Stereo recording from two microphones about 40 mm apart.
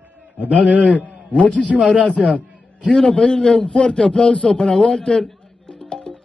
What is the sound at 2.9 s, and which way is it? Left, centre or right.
A man's voice, left.